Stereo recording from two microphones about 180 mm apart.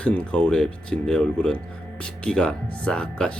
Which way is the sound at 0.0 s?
5° left (ahead or behind).